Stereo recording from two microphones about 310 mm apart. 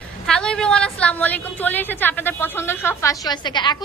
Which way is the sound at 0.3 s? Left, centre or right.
Centre.